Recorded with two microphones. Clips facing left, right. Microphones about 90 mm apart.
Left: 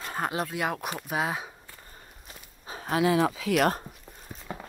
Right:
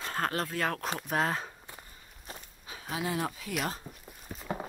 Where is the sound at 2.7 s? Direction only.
40° left (ahead or behind).